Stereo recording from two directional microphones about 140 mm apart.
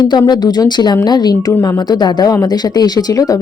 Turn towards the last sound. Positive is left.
turn(degrees=25)  # may be behind; listen again after turning